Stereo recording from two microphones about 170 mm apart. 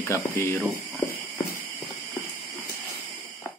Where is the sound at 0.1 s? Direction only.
15° left (ahead or behind).